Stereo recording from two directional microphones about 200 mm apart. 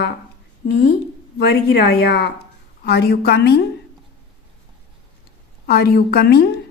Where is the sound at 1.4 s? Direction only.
55° left (ahead or behind).